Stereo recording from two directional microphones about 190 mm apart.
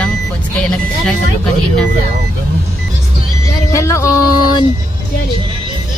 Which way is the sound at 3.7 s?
15° left (ahead or behind).